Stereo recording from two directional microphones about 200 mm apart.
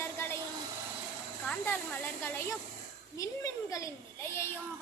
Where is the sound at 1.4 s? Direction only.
5° left (ahead or behind).